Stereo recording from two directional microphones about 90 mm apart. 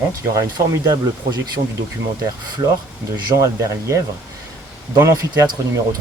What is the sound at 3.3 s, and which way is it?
Speech, 35° right (ahead or behind).